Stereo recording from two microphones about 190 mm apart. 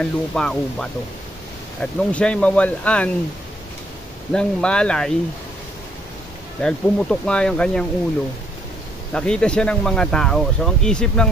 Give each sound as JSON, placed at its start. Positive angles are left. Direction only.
{"t": 0.0, "sound": "speech", "side_deg": 5}
{"t": 4.3, "sound": "speech", "side_deg": 5}
{"t": 6.6, "sound": "speech", "side_deg": 5}
{"t": 9.1, "sound": "speech", "side_deg": 5}